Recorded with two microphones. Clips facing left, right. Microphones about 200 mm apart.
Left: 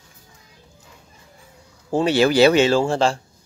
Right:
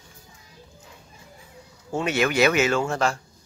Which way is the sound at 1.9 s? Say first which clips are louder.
Left 7 dB; 30° left (ahead or behind).